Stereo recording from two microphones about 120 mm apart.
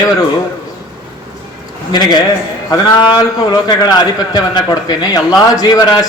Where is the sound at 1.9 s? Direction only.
35° left (ahead or behind).